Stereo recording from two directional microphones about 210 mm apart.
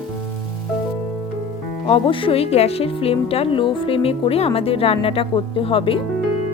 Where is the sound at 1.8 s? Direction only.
25° left (ahead or behind).